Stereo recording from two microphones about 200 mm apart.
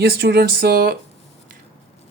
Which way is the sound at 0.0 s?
55° right (ahead or behind).